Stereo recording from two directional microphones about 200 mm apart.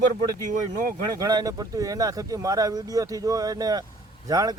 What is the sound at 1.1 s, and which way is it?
A man's voice, 20° right (ahead or behind).